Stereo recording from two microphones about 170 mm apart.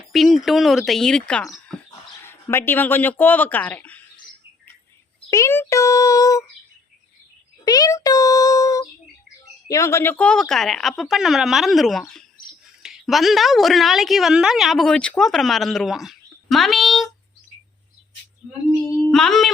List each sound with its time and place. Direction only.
0.1 s speech: centre (ahead or behind)
5.3 s speech: 15° left (ahead or behind)
7.6 s a child's voice: 20° left (ahead or behind); by 17.1 s centre (ahead or behind)
18.9 s speech: 15° left (ahead or behind)
19.1 s a woman's voice: centre (ahead or behind)